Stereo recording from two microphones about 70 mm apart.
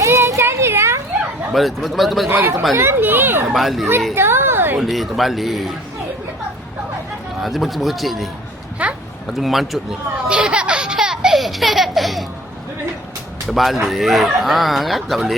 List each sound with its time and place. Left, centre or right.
0.0 s a sound: right
1.5 s speech: centre
2.7 s speech: right
3.5 s speech: centre
4.1 s a sound: right
4.8 s speech: centre
7.3 s speech: centre
8.8 s a sound: right
9.2 s speech: centre
10.2 s baby laughter: centre
13.5 s speech: centre